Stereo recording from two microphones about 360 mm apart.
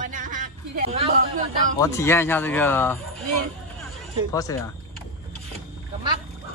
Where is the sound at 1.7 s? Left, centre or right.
Centre.